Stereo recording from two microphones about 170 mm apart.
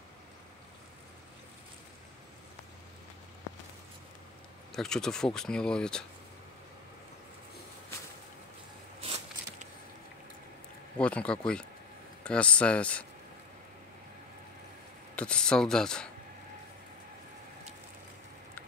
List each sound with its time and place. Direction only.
4.7 s speech: 5° left (ahead or behind)
9.0 s biting: 35° right (ahead or behind)
11.0 s speech: 5° left (ahead or behind)
15.1 s speech: 5° left (ahead or behind)